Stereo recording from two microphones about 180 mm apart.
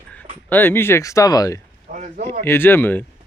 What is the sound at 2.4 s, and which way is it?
Speech, 15° left (ahead or behind).